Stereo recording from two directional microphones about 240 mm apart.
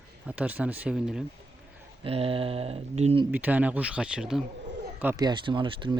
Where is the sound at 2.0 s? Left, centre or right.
Right.